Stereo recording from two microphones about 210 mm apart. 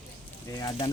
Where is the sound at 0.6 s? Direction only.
20° left (ahead or behind).